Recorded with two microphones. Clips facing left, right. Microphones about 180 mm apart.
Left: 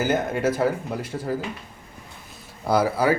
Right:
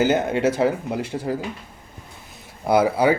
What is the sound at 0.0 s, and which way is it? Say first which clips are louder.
Speech: right 3 dB; 25° right (ahead or behind).